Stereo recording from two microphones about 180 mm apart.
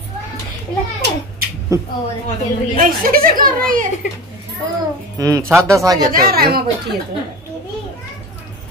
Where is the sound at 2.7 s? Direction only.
55° right (ahead or behind).